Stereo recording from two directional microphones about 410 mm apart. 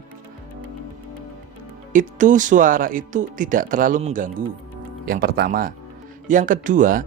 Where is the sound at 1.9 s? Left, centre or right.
Centre.